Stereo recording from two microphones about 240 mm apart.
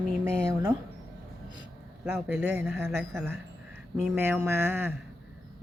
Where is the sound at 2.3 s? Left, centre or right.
Centre.